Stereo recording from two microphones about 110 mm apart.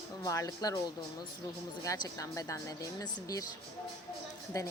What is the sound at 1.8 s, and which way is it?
A woman's voice, 35° left (ahead or behind).